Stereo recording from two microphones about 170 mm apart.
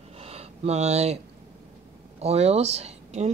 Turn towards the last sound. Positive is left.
turn(degrees=-40)  # may be behind; listen again after turning